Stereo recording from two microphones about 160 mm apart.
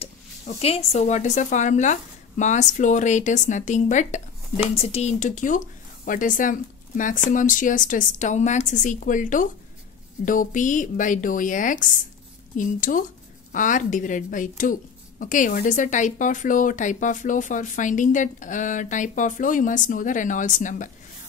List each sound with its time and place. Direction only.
0.6 s a woman's voice: 40° left (ahead or behind)